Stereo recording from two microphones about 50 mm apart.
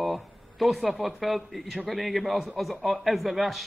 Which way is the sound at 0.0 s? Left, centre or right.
Centre.